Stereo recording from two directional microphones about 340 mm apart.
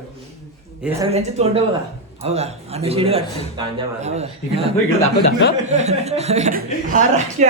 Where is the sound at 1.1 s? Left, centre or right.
Centre.